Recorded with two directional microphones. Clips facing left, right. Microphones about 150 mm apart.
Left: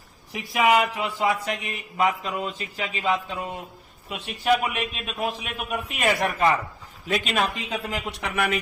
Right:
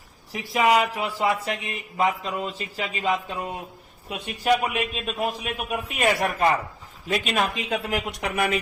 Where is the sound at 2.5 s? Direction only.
35° right (ahead or behind).